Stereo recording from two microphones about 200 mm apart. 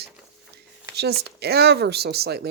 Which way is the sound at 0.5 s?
55° right (ahead or behind).